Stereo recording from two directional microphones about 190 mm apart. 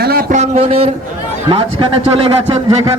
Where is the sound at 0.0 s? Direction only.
50° right (ahead or behind); by 0.9 s 30° right (ahead or behind).